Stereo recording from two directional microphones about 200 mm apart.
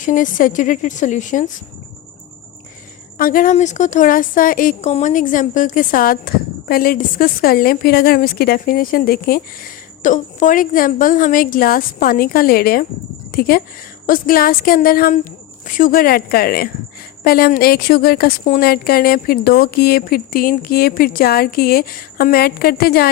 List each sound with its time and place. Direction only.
0.0 s a woman's voice: 40° left (ahead or behind)
3.2 s a woman's voice: 45° left (ahead or behind)